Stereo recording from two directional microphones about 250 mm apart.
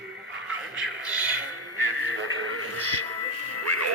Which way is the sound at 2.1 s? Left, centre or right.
Right.